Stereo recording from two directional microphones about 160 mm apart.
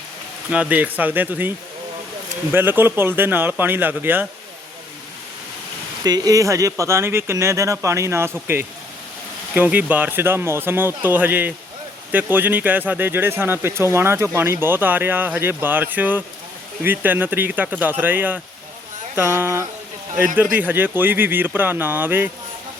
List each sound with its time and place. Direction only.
0.5 s speech: 10° right (ahead or behind)
6.0 s speech: 25° right (ahead or behind)